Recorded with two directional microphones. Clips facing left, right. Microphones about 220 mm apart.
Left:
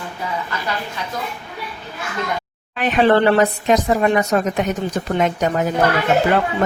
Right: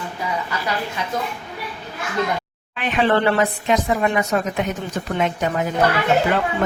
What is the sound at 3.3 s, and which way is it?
A woman's voice, 40° left (ahead or behind).